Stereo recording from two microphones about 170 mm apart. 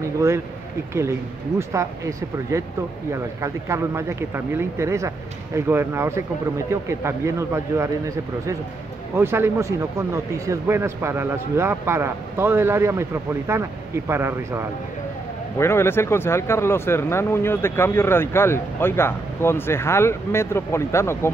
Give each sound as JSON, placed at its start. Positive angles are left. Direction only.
{"t": 1.6, "sound": "speech", "side_deg": -20}
{"t": 9.1, "sound": "speech", "side_deg": -15}
{"t": 15.5, "sound": "speech", "side_deg": 15}